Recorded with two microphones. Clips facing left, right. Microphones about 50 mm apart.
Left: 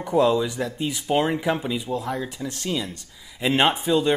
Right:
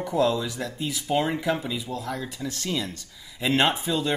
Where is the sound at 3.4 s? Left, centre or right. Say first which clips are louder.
Left 2 dB; centre.